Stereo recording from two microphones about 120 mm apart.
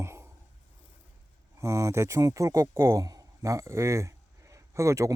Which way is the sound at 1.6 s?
25° right (ahead or behind).